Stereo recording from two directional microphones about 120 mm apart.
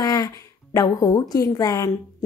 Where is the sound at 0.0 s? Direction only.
30° left (ahead or behind).